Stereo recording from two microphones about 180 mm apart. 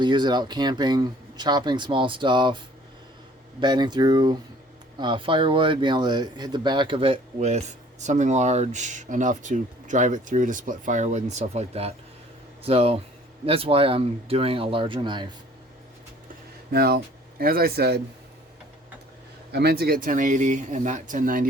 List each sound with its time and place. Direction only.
0.0 s speech: 25° right (ahead or behind)
3.6 s speech: 25° right (ahead or behind)
16.7 s speech: 60° right (ahead or behind)
19.5 s speech: 65° right (ahead or behind); by 21.4 s 50° right (ahead or behind)